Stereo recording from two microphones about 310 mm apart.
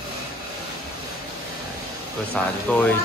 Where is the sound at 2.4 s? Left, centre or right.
Centre.